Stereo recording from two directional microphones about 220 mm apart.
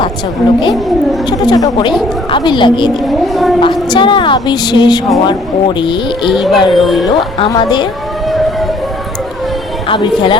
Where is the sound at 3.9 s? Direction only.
20° left (ahead or behind).